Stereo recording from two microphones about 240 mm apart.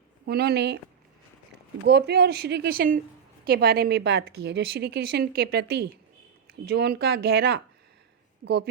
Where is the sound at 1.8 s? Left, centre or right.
Right.